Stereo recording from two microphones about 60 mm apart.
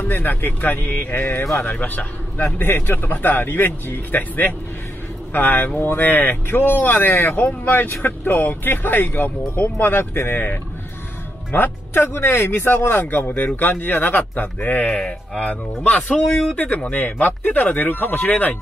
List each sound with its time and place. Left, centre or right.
0.0 s speech: left
1.6 s speech: left
13.0 s speech: left
14.9 s speech: centre